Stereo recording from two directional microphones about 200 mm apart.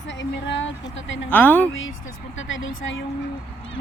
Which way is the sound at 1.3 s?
10° left (ahead or behind).